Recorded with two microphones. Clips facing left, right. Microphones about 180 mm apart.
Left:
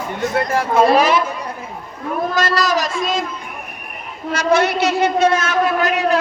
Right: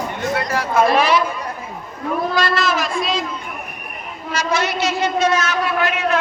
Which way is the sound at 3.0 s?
45° left (ahead or behind).